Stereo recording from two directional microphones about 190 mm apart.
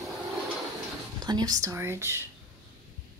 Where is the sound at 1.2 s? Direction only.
20° right (ahead or behind).